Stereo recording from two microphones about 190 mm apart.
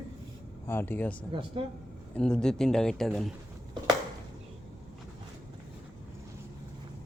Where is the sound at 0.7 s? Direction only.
10° left (ahead or behind).